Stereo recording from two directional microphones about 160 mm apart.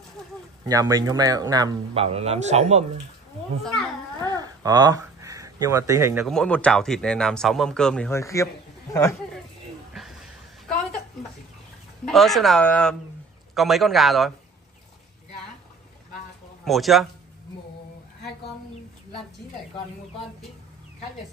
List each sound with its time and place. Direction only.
0.7 s speech: 20° right (ahead or behind)
2.0 s a man's voice: 40° right (ahead or behind)
3.6 s speech: centre (ahead or behind)
4.3 s a sound: 25° right (ahead or behind)
6.2 s speech: 5° left (ahead or behind)
8.1 s a man's voice: 20° left (ahead or behind)
9.9 s a sound: centre (ahead or behind)
12.1 s speech: centre (ahead or behind)
16.6 s speech: centre (ahead or behind)